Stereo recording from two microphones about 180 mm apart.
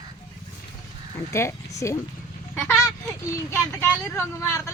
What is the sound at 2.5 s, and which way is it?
Speech, centre (ahead or behind).